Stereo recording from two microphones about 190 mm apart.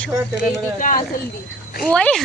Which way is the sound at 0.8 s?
45° left (ahead or behind).